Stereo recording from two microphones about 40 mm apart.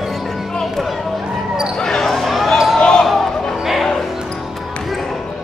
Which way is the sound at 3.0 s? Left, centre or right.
Centre.